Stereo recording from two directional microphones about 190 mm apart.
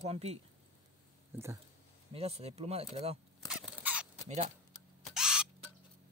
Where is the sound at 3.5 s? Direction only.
5° right (ahead or behind).